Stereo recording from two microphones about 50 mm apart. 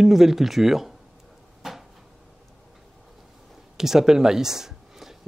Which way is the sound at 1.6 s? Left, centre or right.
Centre.